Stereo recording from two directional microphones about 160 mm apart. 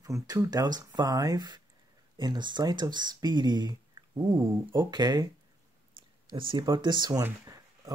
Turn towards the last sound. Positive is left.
turn(degrees=-25)  # may be behind; listen again after turning